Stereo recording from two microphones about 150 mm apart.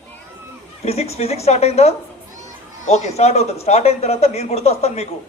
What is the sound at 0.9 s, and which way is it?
A man's voice, 45° left (ahead or behind).